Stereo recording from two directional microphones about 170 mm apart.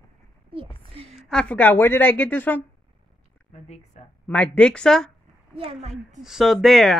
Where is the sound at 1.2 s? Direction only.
5° left (ahead or behind).